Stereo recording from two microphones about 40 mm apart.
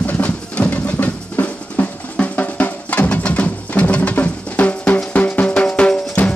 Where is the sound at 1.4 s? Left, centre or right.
Left.